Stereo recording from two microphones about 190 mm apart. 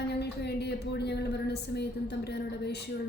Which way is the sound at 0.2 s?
60° left (ahead or behind).